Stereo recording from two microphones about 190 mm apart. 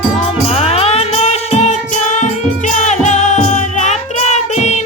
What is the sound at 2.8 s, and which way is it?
Music, 40° left (ahead or behind).